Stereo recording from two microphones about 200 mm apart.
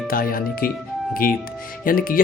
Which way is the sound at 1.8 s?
45° left (ahead or behind).